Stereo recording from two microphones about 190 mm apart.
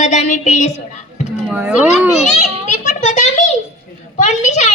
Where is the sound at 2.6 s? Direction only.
40° left (ahead or behind).